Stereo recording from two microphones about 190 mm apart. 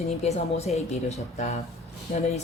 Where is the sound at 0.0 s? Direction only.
35° left (ahead or behind).